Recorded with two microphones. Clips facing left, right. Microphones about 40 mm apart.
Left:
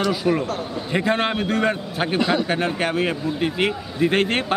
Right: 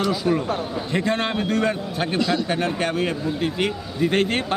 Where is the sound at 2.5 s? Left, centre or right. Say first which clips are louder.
Left 1 dB; centre.